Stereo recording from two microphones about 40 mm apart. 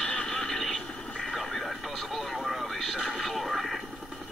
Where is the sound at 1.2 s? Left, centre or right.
Centre.